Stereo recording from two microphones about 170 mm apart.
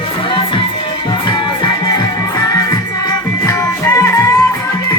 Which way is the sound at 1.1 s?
25° left (ahead or behind).